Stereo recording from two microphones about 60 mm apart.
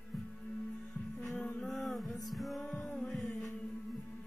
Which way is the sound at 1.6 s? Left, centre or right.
Centre.